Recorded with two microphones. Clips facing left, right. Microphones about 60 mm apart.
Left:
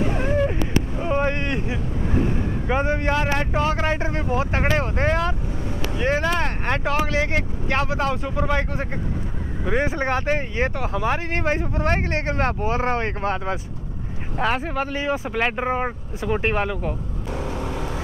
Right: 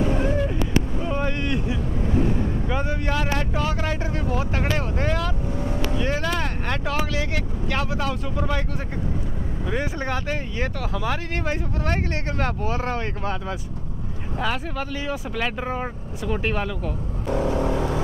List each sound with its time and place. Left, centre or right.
0.1 s vehicle: left
2.7 s speech: left
17.3 s vehicle: right